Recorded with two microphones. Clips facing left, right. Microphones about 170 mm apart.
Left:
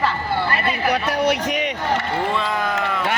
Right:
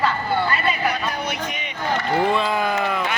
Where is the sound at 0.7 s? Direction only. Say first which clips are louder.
Left 3 dB; 75° left (ahead or behind).